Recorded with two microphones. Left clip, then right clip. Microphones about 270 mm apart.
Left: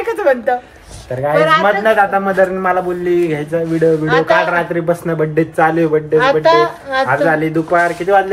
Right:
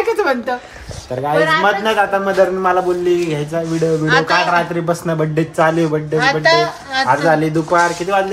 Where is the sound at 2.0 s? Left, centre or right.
Centre.